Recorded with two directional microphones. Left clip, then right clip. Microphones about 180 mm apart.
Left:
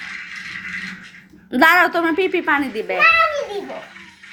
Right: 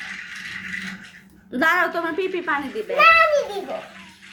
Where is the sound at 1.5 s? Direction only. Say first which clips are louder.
Left 6 dB; 40° left (ahead or behind).